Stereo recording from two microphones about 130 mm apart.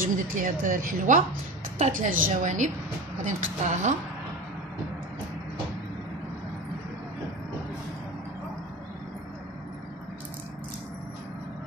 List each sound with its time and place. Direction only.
0.0 s a woman's voice: 90° right; by 3.9 s 65° right (ahead or behind)